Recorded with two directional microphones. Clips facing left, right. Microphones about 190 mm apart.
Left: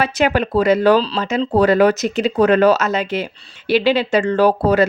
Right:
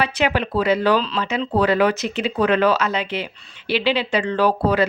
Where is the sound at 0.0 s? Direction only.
45° left (ahead or behind).